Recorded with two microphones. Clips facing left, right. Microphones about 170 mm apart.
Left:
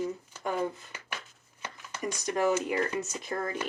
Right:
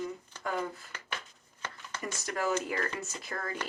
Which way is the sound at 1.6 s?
15° left (ahead or behind).